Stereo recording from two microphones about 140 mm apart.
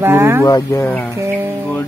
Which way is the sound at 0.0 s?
15° right (ahead or behind).